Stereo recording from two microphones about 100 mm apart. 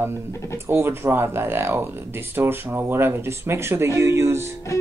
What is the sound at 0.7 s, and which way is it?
Speech, 20° right (ahead or behind).